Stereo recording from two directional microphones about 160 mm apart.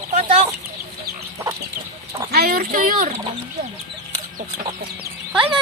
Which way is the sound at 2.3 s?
75° right (ahead or behind).